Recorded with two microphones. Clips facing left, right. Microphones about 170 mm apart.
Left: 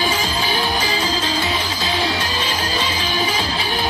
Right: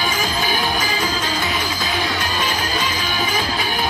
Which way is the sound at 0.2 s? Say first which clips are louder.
Even; 30° left (ahead or behind).